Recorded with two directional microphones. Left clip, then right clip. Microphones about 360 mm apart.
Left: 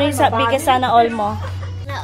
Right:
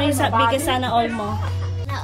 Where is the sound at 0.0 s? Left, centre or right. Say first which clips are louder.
Left 3 dB; centre.